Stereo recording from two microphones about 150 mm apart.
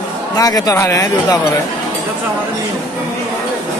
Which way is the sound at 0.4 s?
25° left (ahead or behind).